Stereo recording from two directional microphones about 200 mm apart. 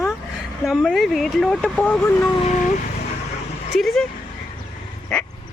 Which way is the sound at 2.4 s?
35° left (ahead or behind).